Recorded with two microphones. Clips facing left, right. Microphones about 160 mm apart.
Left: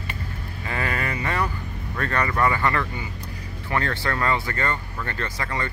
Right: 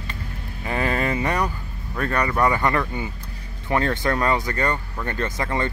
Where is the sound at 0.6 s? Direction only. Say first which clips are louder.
Right 5 dB; 20° right (ahead or behind).